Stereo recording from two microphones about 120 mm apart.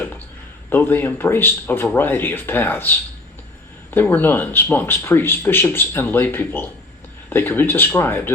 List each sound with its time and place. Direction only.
0.7 s speech: 15° left (ahead or behind)